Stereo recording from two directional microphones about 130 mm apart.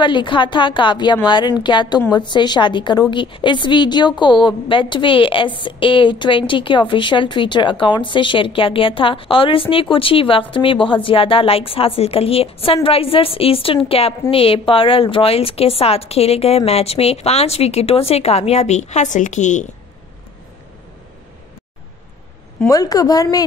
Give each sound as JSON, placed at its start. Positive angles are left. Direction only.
{"t": 0.0, "sound": "a woman's voice", "side_deg": 40}
{"t": 22.7, "sound": "a woman's voice", "side_deg": 30}